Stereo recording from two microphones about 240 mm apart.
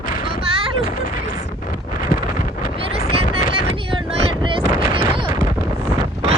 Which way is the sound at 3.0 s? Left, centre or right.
Left.